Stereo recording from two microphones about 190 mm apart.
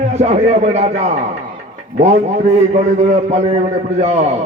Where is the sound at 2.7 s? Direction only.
35° right (ahead or behind).